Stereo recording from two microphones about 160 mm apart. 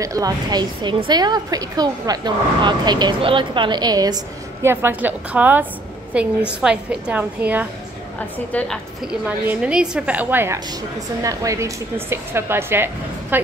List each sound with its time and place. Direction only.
0.0 s a woman's voice: 20° right (ahead or behind)
4.6 s a woman's voice: 10° right (ahead or behind)
8.5 s a woman's voice: 10° left (ahead or behind)
9.0 s a woman's voice: 5° right (ahead or behind)